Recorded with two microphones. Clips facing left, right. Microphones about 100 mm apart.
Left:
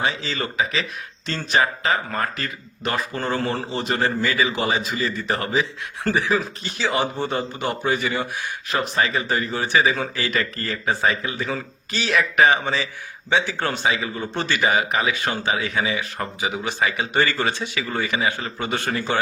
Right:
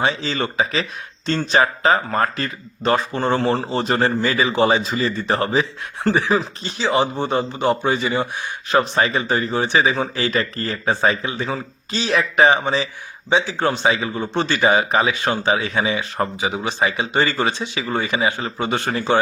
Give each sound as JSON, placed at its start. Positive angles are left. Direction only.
{"t": 0.0, "sound": "speech", "side_deg": -35}
{"t": 8.7, "sound": "speech", "side_deg": -35}
{"t": 13.8, "sound": "speech", "side_deg": -30}